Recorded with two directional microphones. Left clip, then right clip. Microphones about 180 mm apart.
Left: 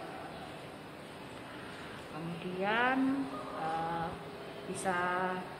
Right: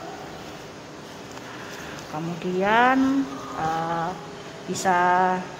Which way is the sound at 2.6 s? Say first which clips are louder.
Right 12 dB; 60° right (ahead or behind).